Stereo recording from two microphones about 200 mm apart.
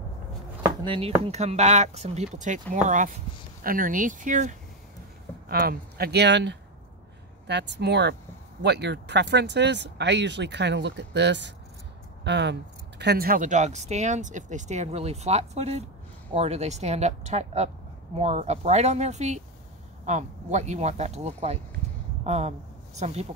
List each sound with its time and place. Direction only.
0.8 s speech: 30° right (ahead or behind)
5.5 s speech: 50° right (ahead or behind); by 23.2 s 30° right (ahead or behind)